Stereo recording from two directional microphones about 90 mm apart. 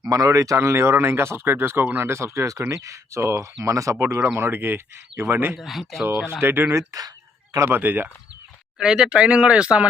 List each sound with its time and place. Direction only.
0.0 s speech: 40° right (ahead or behind); by 5.5 s 20° right (ahead or behind)
5.5 s speech: centre (ahead or behind)
6.1 s speech: 25° right (ahead or behind)
8.8 s speech: 5° right (ahead or behind)